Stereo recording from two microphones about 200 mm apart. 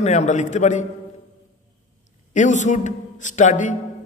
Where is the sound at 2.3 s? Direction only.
35° left (ahead or behind).